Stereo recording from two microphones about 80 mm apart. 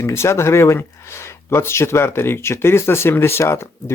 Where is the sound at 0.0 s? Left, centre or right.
Left.